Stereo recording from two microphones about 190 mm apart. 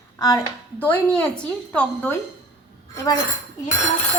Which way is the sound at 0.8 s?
10° left (ahead or behind).